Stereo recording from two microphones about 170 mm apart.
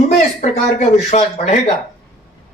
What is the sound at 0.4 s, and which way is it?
Speech, 45° left (ahead or behind).